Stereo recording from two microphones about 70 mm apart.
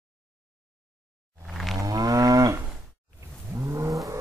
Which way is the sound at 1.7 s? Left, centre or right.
Right.